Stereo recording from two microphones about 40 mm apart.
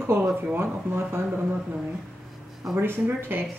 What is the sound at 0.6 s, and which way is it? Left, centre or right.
Speech, right.